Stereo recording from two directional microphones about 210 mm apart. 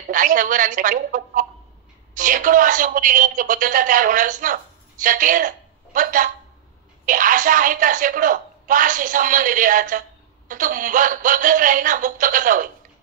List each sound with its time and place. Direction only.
0.1 s a woman's voice: 40° right (ahead or behind)